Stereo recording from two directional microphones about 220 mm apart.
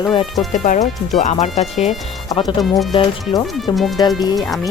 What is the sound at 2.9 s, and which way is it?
Speech, 20° left (ahead or behind).